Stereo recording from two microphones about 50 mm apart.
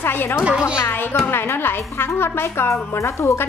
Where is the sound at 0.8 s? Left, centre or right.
Left.